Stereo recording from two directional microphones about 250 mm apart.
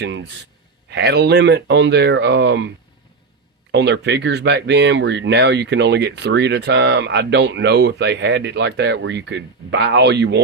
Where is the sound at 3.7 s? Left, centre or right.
Right.